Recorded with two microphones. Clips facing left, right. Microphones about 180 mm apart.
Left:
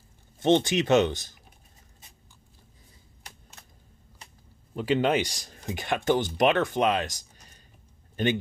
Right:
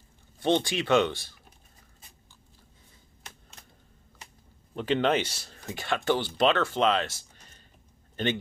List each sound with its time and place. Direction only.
0.4 s speech: 20° left (ahead or behind)
4.7 s speech: 10° left (ahead or behind)